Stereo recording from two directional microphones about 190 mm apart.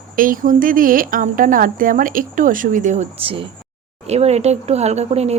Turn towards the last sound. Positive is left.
turn(degrees=-35)  # may be behind; listen again after turning